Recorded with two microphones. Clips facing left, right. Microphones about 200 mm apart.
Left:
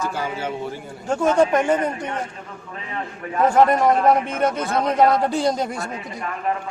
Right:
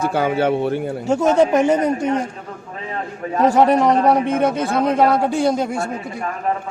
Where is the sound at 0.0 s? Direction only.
60° right (ahead or behind).